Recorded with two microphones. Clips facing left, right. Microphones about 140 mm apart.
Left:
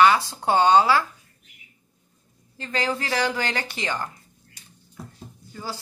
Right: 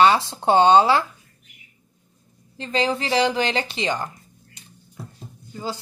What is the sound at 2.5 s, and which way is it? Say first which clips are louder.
A woman's voice: right 4 dB; 20° right (ahead or behind).